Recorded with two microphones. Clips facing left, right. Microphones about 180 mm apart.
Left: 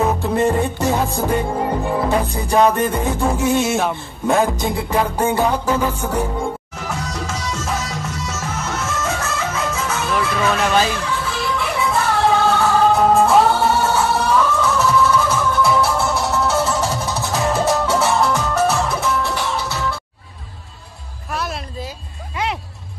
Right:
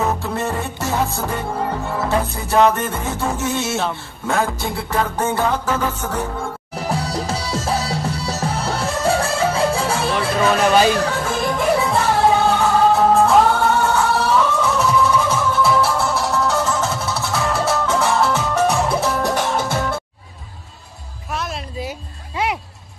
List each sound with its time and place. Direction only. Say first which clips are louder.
0.2 s music: left 6 dB; 15° left (ahead or behind)
6.7 s music: right 4 dB; 35° right (ahead or behind)
11.0 s music: right 4 dB; 45° right (ahead or behind)
12.5 s music: even; 10° right (ahead or behind)
13.1 s music: even; centre (ahead or behind)
14.3 s music: even; 10° right (ahead or behind); by 17.9 s 15° left (ahead or behind)
17.9 s music: left 1 dB; centre (ahead or behind)
18.9 s music: right 2 dB; 35° right (ahead or behind)
21.3 s music: left 1 dB; centre (ahead or behind)
21.8 s music: right 2 dB; 20° right (ahead or behind)